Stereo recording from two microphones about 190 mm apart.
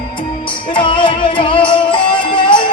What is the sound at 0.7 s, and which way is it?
Music, 25° left (ahead or behind).